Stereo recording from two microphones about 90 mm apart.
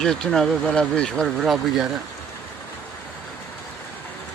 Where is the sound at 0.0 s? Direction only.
5° left (ahead or behind).